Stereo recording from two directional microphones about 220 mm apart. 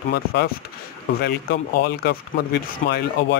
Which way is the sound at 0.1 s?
45° left (ahead or behind).